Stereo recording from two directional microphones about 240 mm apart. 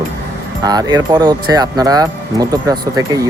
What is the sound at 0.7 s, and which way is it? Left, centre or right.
Speech, centre.